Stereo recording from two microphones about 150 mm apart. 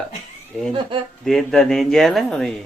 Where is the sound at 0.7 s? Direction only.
35° right (ahead or behind).